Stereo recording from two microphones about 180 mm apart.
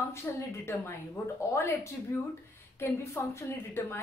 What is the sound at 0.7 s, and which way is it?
A woman's voice, 15° left (ahead or behind).